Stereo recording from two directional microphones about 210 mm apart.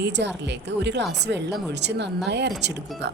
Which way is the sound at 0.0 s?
55° right (ahead or behind).